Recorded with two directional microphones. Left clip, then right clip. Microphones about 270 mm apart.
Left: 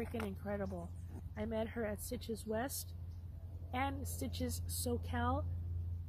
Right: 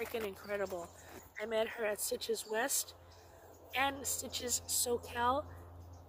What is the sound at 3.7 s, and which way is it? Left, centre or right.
Speech, centre.